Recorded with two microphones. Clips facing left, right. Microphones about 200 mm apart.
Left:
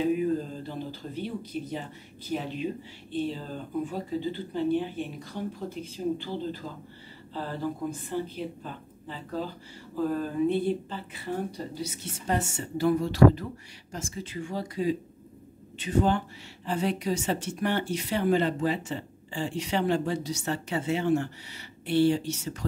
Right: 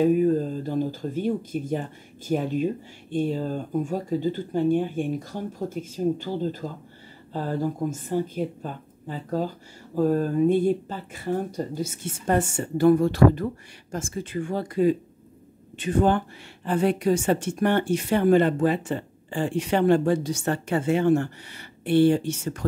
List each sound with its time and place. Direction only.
0.0 s speech: 45° right (ahead or behind)